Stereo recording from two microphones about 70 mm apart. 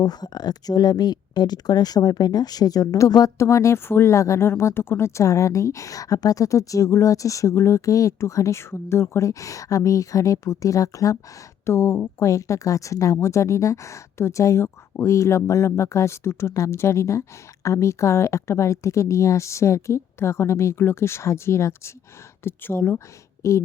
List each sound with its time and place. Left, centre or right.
0.0 s speech: left
3.3 s a woman's voice: left
11.6 s a woman's voice: left
23.4 s a woman's voice: left